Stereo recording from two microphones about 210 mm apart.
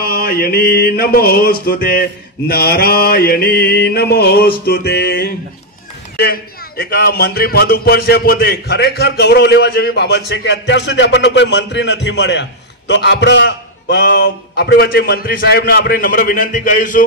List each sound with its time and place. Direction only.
0.0 s speech: 45° left (ahead or behind)